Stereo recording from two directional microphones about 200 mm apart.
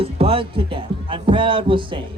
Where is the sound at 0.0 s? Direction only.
30° right (ahead or behind).